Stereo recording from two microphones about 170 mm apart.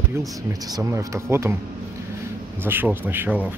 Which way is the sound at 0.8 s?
15° right (ahead or behind).